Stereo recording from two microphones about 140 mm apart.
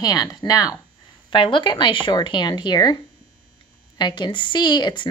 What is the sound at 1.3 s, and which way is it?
Speech, 35° left (ahead or behind).